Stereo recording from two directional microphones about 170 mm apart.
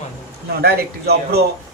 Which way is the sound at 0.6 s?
70° right (ahead or behind).